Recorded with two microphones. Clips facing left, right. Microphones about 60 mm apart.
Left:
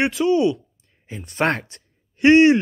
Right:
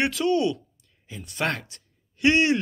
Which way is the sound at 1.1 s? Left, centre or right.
Left.